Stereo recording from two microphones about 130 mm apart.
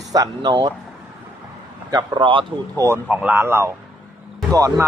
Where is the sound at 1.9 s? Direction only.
35° right (ahead or behind).